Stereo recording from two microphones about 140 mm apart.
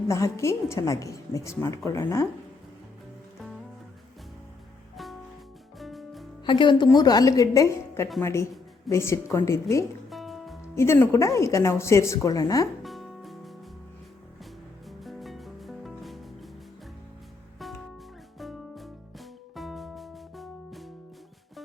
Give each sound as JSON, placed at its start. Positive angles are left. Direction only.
{"t": 0.1, "sound": "a woman's voice", "side_deg": 20}
{"t": 5.8, "sound": "music", "side_deg": 0}
{"t": 6.4, "sound": "a woman's voice", "side_deg": 35}
{"t": 10.1, "sound": "music", "side_deg": 0}
{"t": 10.8, "sound": "a woman's voice", "side_deg": 20}
{"t": 12.8, "sound": "music", "side_deg": 0}
{"t": 14.8, "sound": "music", "side_deg": 0}
{"t": 18.3, "sound": "music", "side_deg": 0}